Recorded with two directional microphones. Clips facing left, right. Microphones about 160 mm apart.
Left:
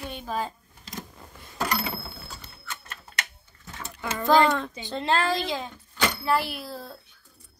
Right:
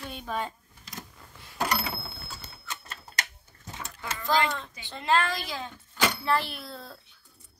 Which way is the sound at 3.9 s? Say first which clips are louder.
Left 6 dB; 60° left (ahead or behind).